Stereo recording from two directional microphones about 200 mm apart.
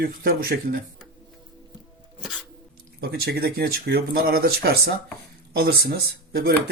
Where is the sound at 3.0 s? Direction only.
50° right (ahead or behind).